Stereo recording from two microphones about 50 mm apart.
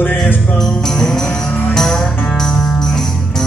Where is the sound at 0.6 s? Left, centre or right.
Centre.